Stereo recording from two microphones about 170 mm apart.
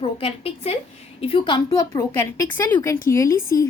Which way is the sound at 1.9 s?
15° left (ahead or behind).